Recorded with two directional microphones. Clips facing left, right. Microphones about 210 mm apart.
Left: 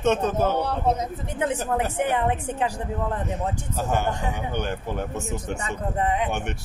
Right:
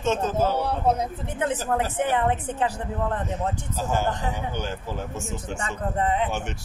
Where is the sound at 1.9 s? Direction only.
10° left (ahead or behind).